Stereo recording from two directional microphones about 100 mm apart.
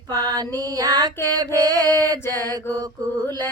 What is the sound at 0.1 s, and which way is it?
Music, 40° right (ahead or behind).